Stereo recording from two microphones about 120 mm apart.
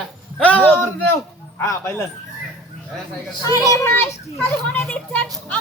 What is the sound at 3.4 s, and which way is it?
A child's voice, 30° left (ahead or behind).